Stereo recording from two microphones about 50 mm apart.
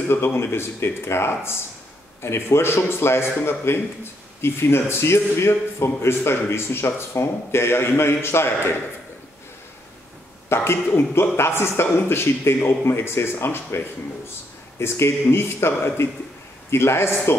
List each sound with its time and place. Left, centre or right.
0.1 s a man's voice: left
10.5 s a man's voice: left
14.8 s a man's voice: left